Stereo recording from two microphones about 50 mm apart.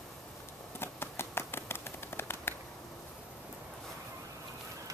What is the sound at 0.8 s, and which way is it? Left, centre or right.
Finger snapping, left.